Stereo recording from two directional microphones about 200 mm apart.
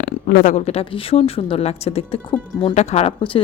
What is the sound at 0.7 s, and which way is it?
Speech, 30° left (ahead or behind).